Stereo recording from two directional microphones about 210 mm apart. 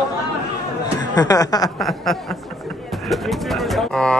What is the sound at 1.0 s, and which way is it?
Speech, 20° left (ahead or behind).